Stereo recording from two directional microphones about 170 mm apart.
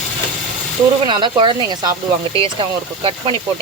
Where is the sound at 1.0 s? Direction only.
30° right (ahead or behind).